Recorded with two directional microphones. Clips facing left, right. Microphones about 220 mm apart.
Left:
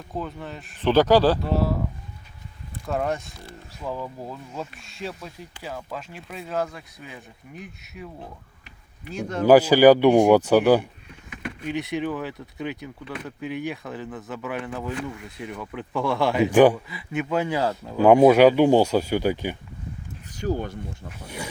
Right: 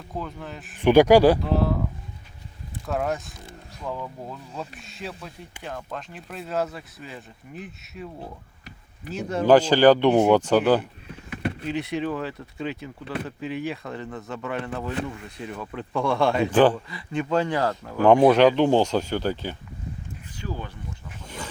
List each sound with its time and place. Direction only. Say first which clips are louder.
0.1 s speech: left 2 dB; centre (ahead or behind)
0.8 s speech: right 3 dB; 15° right (ahead or behind)
1.4 s speech: even; centre (ahead or behind)
2.8 s speech: left 1 dB; centre (ahead or behind)
9.5 s speech: left 2 dB; 10° left (ahead or behind)
11.3 s vehicle: right 4 dB; 35° right (ahead or behind)
11.7 s speech: left 2 dB; centre (ahead or behind)
20.3 s speech: left 8 dB; 45° left (ahead or behind)
21.2 s speech: left 3 dB; 10° left (ahead or behind)